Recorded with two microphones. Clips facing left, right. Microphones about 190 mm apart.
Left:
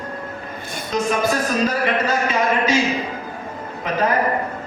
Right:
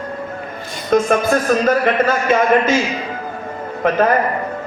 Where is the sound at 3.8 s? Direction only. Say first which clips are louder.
Right 7 dB; 55° right (ahead or behind).